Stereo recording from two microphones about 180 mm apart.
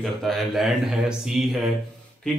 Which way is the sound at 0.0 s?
Centre (ahead or behind).